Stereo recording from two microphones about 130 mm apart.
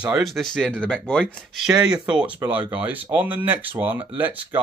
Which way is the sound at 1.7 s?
5° right (ahead or behind).